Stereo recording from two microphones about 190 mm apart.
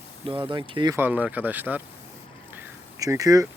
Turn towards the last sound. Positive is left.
turn(degrees=-20)  # may be behind; listen again after turning